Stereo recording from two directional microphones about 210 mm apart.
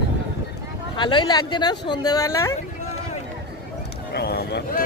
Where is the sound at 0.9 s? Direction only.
20° left (ahead or behind).